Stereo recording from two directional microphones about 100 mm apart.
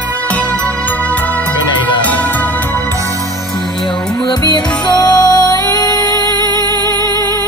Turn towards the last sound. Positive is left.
turn(degrees=40)  # may be behind; listen again after turning